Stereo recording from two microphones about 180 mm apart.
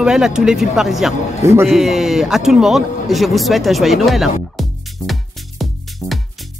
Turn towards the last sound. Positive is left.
turn(degrees=0)  # may be behind; listen again after turning